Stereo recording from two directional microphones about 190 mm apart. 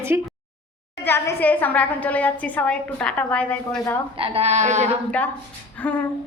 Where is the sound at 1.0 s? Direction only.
10° left (ahead or behind).